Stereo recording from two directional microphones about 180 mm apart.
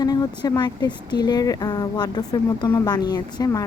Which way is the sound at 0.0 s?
20° left (ahead or behind).